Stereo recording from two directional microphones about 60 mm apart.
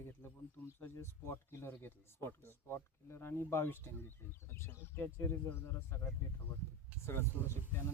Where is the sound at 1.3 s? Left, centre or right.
Left.